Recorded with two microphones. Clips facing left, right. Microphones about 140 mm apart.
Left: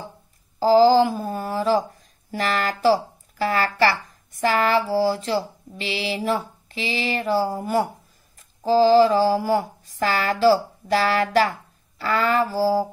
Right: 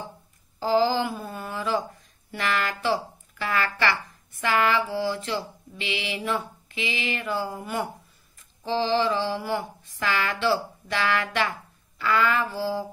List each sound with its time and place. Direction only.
0.6 s speech: 35° left (ahead or behind)
8.4 s mantra: 40° left (ahead or behind)